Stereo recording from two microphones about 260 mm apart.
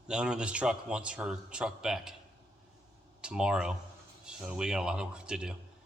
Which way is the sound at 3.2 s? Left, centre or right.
Centre.